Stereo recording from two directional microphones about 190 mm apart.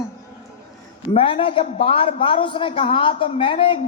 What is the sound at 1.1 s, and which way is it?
A man's voice, 30° left (ahead or behind).